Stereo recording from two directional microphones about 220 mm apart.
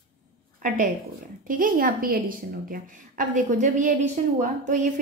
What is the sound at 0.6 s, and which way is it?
A woman's voice, 40° right (ahead or behind).